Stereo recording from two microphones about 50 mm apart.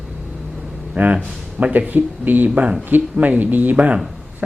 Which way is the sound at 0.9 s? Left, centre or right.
Right.